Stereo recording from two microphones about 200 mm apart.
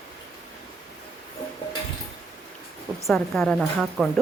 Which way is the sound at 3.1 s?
Centre (ahead or behind).